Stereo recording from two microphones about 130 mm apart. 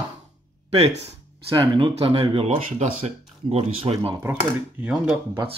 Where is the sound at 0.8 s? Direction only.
55° right (ahead or behind).